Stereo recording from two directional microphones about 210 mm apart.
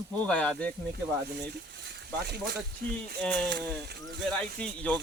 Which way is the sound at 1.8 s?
50° right (ahead or behind).